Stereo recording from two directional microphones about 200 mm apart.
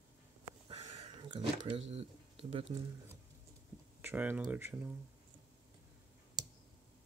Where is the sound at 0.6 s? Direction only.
35° right (ahead or behind).